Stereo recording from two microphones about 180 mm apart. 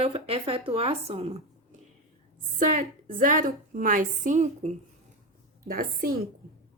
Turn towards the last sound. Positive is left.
turn(degrees=-50)  # may be behind; listen again after turning